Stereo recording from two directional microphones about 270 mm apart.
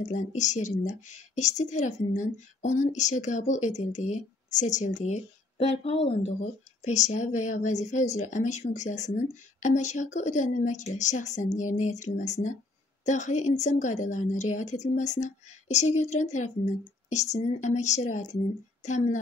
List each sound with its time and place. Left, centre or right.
0.0 s a woman's voice: left